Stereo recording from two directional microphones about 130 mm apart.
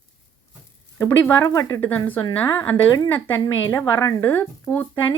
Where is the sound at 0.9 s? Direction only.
20° left (ahead or behind).